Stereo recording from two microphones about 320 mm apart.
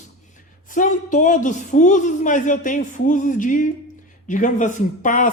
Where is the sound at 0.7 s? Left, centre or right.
Left.